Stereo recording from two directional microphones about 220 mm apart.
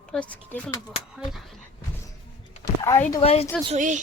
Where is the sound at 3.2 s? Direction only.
30° left (ahead or behind).